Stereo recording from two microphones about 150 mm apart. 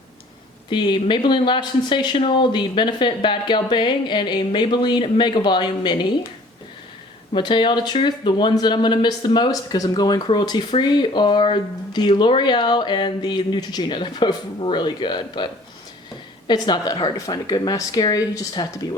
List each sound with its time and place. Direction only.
0.7 s speech: 30° left (ahead or behind)
7.3 s speech: 30° left (ahead or behind)
16.5 s speech: 30° left (ahead or behind)